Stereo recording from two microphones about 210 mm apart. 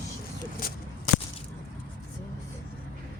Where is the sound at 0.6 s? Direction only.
45° left (ahead or behind).